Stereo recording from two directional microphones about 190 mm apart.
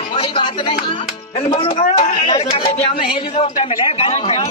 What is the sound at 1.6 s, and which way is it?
A man's voice, 30° left (ahead or behind).